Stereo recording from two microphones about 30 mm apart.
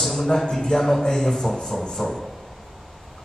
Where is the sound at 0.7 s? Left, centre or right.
Centre.